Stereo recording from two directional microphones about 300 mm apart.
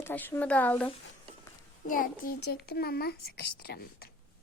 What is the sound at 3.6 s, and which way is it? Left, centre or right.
Speech, left.